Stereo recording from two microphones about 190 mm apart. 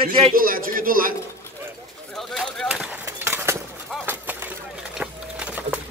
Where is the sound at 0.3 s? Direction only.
50° right (ahead or behind).